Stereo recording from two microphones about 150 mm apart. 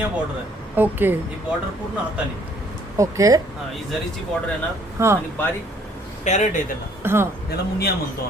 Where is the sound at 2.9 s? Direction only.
20° right (ahead or behind).